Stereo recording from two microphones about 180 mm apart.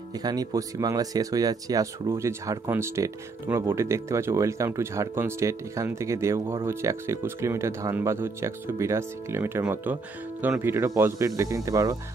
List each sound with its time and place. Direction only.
0.1 s speech: 20° right (ahead or behind)